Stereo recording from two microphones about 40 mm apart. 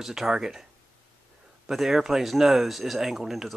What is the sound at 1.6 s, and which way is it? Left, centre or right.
Speech, centre.